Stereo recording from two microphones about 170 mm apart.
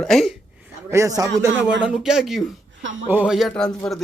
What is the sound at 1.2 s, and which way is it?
Speech, 20° right (ahead or behind).